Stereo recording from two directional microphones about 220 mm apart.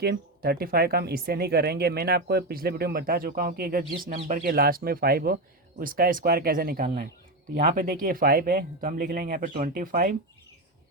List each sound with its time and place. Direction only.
0.0 s speech: 45° right (ahead or behind)